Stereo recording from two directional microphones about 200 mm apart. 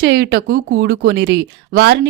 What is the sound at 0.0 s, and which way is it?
Speech, 55° right (ahead or behind).